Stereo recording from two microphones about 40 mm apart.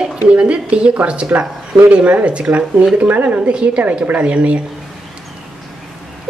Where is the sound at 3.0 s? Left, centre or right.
Right.